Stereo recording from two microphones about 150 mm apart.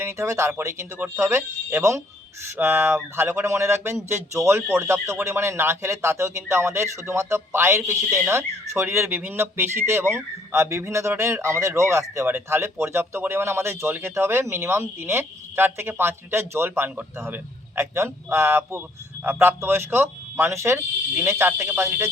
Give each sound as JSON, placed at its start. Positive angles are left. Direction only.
{"t": 0.0, "sound": "speech", "side_deg": -20}